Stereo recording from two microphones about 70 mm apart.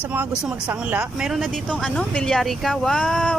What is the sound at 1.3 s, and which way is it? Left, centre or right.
Speech, centre.